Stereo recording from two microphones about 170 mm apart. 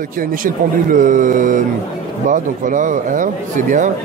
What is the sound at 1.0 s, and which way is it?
Speech, 50° right (ahead or behind).